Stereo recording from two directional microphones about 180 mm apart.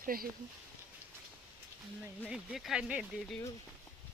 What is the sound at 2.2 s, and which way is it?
Speech, 5° right (ahead or behind).